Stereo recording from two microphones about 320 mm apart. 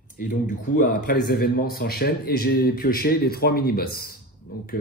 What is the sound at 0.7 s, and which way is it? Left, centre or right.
Speech, left.